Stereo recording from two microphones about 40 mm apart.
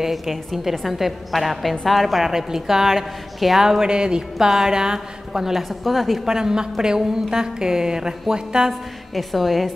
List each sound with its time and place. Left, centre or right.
0.0 s a woman's voice: centre
3.6 s a woman's voice: centre
6.2 s a woman's voice: centre
9.1 s a woman's voice: centre